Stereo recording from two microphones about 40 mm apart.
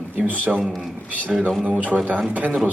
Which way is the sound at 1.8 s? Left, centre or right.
Right.